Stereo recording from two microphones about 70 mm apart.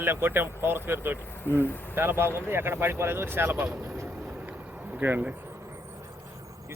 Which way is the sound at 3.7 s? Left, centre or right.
Right.